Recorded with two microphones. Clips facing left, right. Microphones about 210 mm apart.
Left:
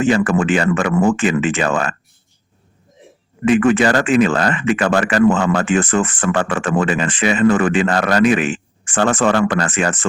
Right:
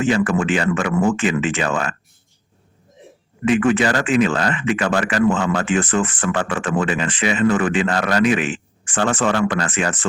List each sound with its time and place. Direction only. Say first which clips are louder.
0.0 s speech: left 3 dB; 45° left (ahead or behind)
3.4 s speech: left 3 dB; 45° left (ahead or behind)